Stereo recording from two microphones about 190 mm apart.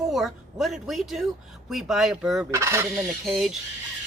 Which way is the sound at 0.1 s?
Centre (ahead or behind).